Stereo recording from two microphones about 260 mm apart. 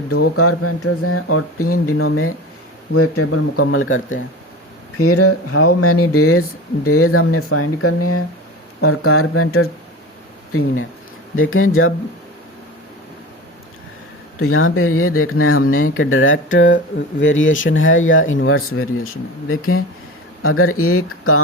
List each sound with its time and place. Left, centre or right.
0.1 s speech: left
4.9 s speech: left
11.3 s speech: left
14.3 s speech: left